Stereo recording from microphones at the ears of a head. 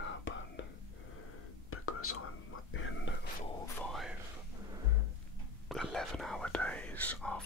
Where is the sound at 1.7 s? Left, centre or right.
Left.